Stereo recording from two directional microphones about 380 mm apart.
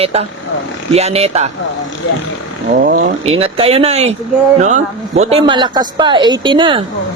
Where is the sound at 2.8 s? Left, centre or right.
Centre.